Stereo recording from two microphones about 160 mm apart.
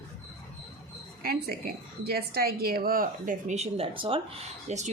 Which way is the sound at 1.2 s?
70° right (ahead or behind).